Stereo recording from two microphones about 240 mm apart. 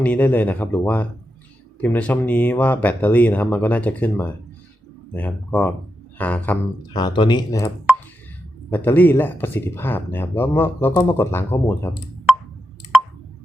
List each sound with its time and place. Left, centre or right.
0.0 s speech: centre
6.8 s speech: centre
8.7 s speech: centre